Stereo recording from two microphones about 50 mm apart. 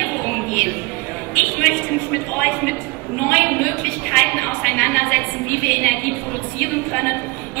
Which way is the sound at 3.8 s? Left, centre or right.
Left.